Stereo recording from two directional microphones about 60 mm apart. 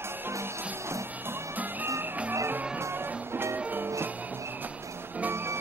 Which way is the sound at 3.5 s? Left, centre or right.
Right.